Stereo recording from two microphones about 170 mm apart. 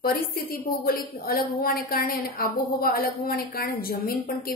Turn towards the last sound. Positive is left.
turn(degrees=60)  # may be behind; listen again after turning